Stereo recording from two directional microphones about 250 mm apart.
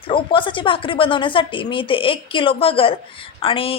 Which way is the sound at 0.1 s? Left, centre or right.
Centre.